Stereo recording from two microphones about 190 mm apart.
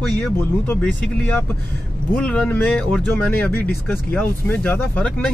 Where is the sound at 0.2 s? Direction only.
10° left (ahead or behind).